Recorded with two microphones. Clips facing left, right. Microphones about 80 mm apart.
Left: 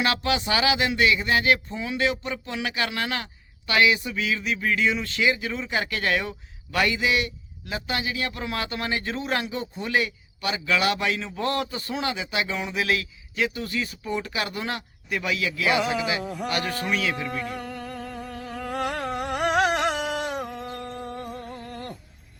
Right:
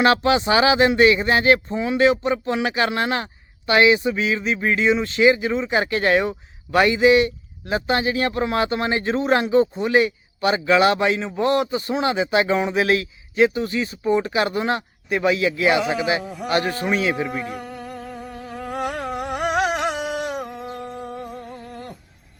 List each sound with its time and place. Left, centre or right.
0.0 s speech: right
16.2 s speech: centre
16.5 s speech: right
17.7 s a sound: centre
21.4 s music: centre